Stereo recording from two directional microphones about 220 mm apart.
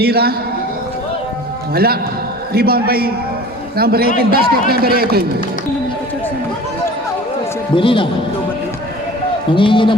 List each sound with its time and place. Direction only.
0.0 s a man's voice: 45° right (ahead or behind)
1.7 s a man's voice: 45° right (ahead or behind)
7.8 s a man's voice: 25° left (ahead or behind)
9.6 s a man's voice: 20° left (ahead or behind)